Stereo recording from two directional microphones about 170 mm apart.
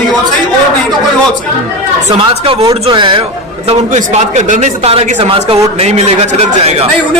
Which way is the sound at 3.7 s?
45° right (ahead or behind).